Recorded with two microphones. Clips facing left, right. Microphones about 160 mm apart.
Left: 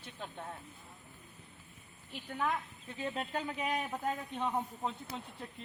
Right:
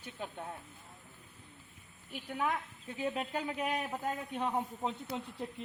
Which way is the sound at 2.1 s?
5° right (ahead or behind).